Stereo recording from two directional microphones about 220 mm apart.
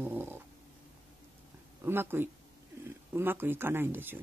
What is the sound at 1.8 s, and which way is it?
Speech, 10° right (ahead or behind).